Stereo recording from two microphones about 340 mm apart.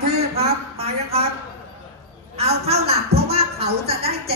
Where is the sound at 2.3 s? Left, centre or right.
Centre.